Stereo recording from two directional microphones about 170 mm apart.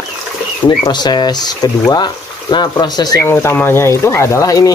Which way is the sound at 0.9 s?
25° left (ahead or behind).